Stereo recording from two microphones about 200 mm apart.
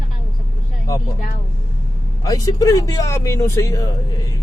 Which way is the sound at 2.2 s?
20° left (ahead or behind).